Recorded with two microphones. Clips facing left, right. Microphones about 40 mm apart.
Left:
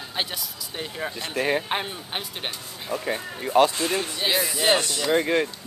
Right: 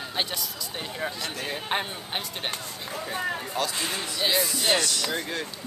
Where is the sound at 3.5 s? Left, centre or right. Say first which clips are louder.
Left 13 dB; left.